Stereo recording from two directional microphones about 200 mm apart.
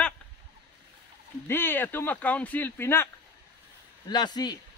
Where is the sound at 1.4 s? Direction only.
10° left (ahead or behind).